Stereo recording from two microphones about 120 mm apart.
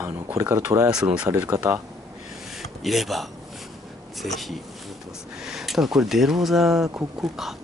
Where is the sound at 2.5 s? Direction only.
Centre (ahead or behind).